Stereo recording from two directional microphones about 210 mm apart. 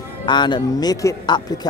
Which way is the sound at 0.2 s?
20° left (ahead or behind).